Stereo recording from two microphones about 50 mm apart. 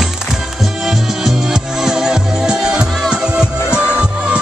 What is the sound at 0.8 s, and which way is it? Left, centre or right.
Music, centre.